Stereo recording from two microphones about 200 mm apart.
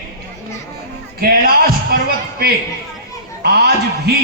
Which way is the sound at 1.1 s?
50° right (ahead or behind).